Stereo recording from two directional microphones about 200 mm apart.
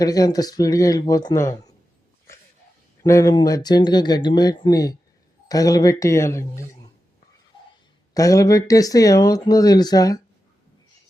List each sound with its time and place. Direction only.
0.0 s speech: 20° left (ahead or behind)
3.0 s speech: 15° left (ahead or behind)
8.1 s speech: 15° left (ahead or behind)